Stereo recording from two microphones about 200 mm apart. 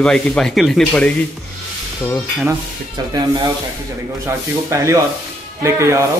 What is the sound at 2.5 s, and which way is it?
Speech, 20° right (ahead or behind).